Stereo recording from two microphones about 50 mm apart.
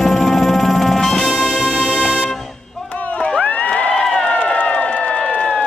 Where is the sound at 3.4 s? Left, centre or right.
Left.